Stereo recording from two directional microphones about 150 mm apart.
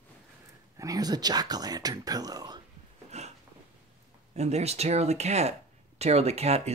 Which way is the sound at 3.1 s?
45° right (ahead or behind).